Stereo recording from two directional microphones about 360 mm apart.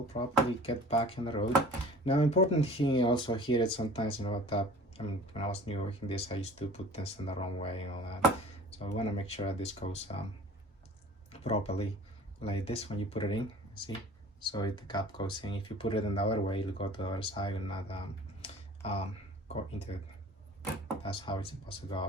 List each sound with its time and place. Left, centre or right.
0.1 s speech: centre
11.3 s speech: centre
18.4 s computer keyboard: centre
21.0 s speech: centre